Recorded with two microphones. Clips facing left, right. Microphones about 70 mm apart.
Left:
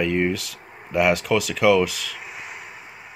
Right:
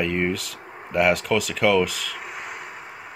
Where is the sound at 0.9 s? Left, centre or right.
Centre.